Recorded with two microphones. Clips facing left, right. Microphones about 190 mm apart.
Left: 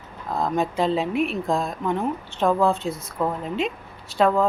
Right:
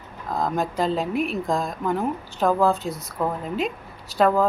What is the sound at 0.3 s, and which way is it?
A woman's voice, centre (ahead or behind).